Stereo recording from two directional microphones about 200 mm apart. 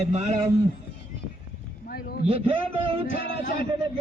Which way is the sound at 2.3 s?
25° right (ahead or behind).